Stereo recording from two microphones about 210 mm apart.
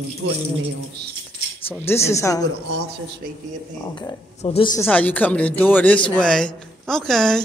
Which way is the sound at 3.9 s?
25° left (ahead or behind).